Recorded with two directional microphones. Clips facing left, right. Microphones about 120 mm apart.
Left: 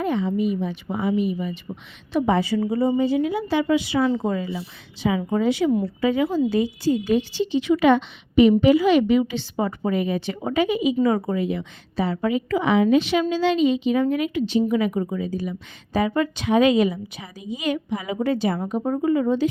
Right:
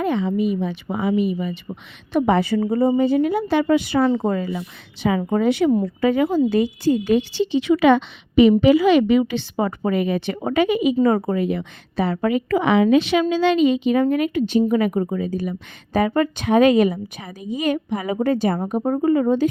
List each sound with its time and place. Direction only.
0.0 s speech: 85° right
2.1 s a woman's voice: 60° right (ahead or behind)
11.0 s a woman's voice: 50° right (ahead or behind)